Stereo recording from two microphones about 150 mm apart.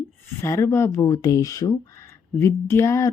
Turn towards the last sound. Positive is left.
turn(degrees=20)  # may be behind; listen again after turning